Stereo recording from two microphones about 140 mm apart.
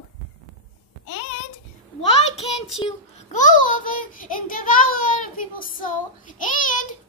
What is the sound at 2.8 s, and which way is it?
A child's voice, 55° left (ahead or behind).